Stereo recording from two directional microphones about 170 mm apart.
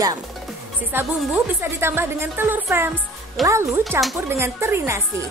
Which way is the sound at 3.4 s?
Centre (ahead or behind).